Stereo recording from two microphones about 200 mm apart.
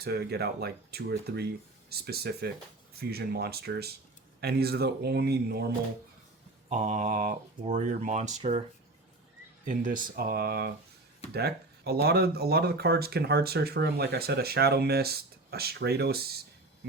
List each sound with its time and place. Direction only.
0.0 s speech: 55° right (ahead or behind)
6.7 s speech: 35° right (ahead or behind)
9.6 s speech: 40° right (ahead or behind)